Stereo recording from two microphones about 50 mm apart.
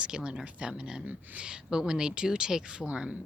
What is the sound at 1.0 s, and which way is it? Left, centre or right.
Speech, right.